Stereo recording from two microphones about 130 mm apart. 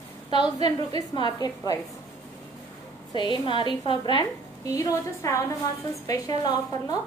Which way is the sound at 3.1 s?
35° left (ahead or behind).